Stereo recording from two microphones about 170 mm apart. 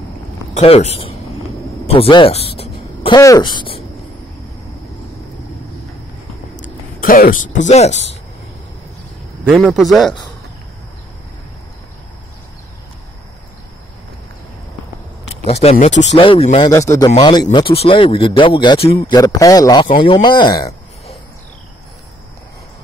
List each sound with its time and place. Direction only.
0.6 s speech: 40° left (ahead or behind)
2.6 s a sound: 35° left (ahead or behind)
3.2 s speech: 20° left (ahead or behind)
7.0 s speech: 55° left (ahead or behind); by 8.2 s 40° left (ahead or behind)
9.6 s speech: 5° left (ahead or behind)
15.4 s speech: 35° left (ahead or behind)
15.9 s speech: 90° left
16.2 s speech: 30° left (ahead or behind)
16.7 s a man's voice: 15° left (ahead or behind)